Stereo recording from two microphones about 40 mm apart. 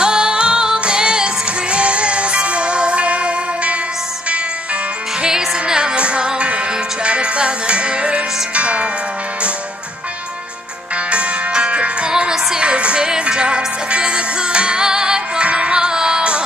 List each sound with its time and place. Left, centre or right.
0.0 s music: right
5.2 s music: centre
11.1 s music: right
12.1 s music: centre